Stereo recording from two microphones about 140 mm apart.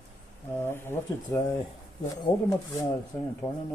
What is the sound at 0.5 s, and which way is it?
Speech, 15° left (ahead or behind).